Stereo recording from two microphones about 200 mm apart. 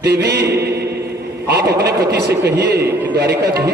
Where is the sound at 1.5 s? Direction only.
55° right (ahead or behind).